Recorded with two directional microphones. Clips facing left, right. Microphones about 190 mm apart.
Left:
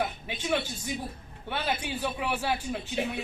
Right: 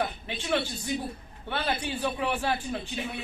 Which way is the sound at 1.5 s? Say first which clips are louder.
Right 1 dB; 10° left (ahead or behind).